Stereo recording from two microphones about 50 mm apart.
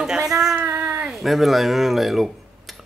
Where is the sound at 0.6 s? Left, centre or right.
Right.